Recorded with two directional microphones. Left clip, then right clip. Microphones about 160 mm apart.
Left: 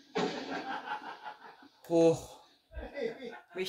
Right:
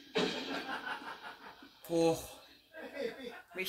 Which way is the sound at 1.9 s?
25° left (ahead or behind).